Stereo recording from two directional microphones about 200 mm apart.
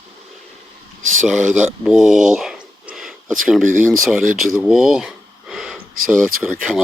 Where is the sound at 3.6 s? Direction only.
40° right (ahead or behind).